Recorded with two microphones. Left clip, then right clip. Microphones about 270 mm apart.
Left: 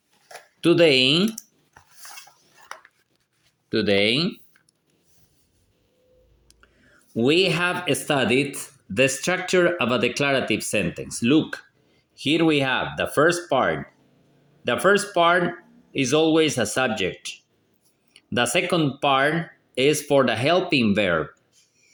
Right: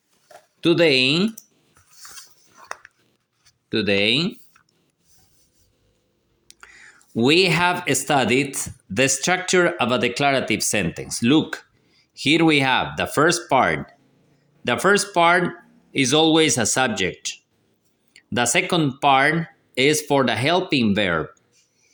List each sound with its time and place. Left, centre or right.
0.6 s speech: centre
3.7 s speech: centre
6.5 s speech: right